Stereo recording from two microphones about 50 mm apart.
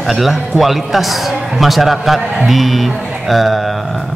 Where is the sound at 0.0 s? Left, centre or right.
Centre.